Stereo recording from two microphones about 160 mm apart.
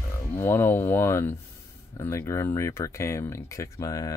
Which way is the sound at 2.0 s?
20° left (ahead or behind).